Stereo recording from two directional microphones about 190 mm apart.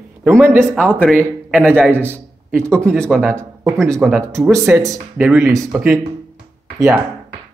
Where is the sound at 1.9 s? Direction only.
10° right (ahead or behind).